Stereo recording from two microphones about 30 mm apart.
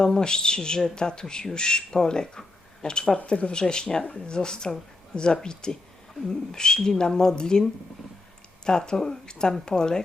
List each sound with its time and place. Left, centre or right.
0.0 s speech: left
3.2 s speech: left
3.5 s speech: left
8.6 s speech: left